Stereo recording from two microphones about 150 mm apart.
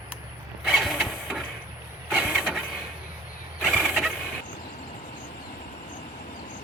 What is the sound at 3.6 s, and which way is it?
Pulleys, 10° right (ahead or behind).